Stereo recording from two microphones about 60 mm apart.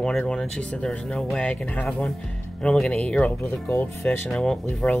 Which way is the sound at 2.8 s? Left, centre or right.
Centre.